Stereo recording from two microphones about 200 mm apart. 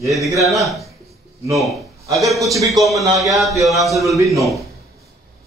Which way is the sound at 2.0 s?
15° right (ahead or behind).